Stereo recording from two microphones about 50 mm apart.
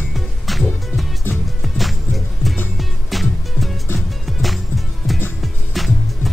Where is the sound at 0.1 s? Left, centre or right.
Centre.